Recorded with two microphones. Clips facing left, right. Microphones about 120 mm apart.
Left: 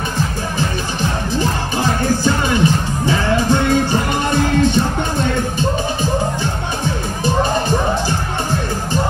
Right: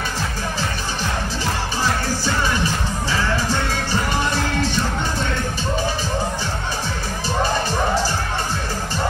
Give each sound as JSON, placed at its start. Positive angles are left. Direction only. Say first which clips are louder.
{"t": 1.4, "sound": "music", "louder": "left 4 dB", "side_deg": 55}